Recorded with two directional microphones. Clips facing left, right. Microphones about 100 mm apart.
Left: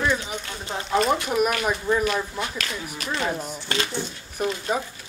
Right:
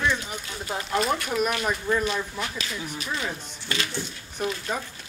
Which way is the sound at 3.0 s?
65° left (ahead or behind).